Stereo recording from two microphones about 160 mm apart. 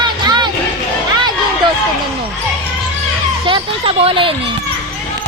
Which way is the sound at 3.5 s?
35° right (ahead or behind).